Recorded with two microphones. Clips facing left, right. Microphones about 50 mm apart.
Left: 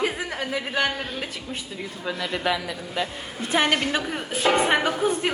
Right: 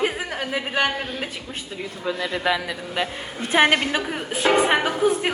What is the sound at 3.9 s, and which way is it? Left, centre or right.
A woman's voice, centre.